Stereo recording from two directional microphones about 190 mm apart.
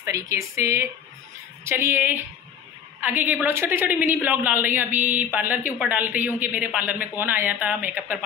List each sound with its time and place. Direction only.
0.0 s a woman's voice: 15° right (ahead or behind)